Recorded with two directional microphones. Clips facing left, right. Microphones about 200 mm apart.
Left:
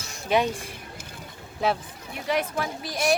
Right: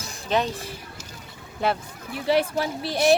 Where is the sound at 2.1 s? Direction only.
30° right (ahead or behind).